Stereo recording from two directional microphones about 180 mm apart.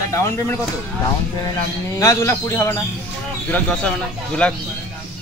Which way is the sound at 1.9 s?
15° left (ahead or behind).